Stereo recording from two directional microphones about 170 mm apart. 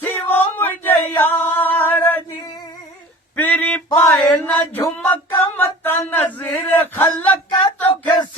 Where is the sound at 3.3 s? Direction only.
10° left (ahead or behind).